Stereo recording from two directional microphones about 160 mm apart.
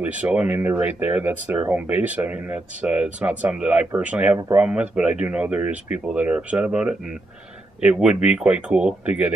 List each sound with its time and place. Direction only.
0.0 s speech: 10° right (ahead or behind)